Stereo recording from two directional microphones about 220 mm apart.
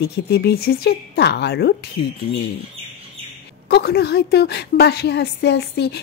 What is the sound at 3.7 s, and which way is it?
A woman's voice, 45° left (ahead or behind).